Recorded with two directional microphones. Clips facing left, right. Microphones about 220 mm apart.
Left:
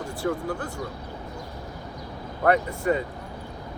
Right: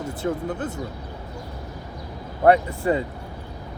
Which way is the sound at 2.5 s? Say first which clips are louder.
Right 4 dB; 30° right (ahead or behind).